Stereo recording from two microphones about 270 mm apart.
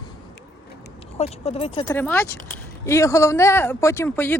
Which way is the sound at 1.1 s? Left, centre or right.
Left.